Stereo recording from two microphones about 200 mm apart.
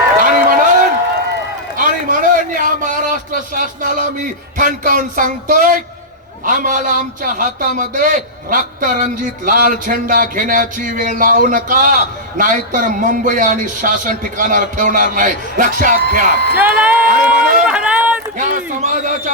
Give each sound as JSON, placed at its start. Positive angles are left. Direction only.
{"t": 0.2, "sound": "a sound", "side_deg": -45}
{"t": 6.4, "sound": "a man's voice", "side_deg": -45}
{"t": 16.6, "sound": "speech", "side_deg": -10}
{"t": 17.1, "sound": "a man's voice", "side_deg": -45}
{"t": 17.7, "sound": "run", "side_deg": -5}
{"t": 18.3, "sound": "a man's voice", "side_deg": -40}